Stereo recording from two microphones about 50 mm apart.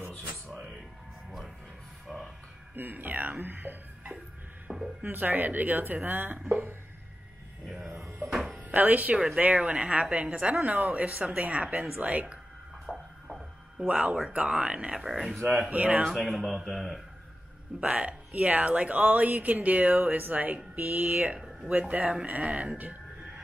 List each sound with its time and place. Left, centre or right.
2.1 s music: centre
2.7 s speech: right
4.7 s a sound: right
5.0 s speech: right
8.3 s music: centre
8.5 s speech: right
9.1 s speech: centre
9.4 s speech: right
12.8 s a sound: centre
13.7 s speech: right
15.0 s a man's voice: centre
15.7 s speech: right
16.0 s a man's voice: centre
17.7 s speech: right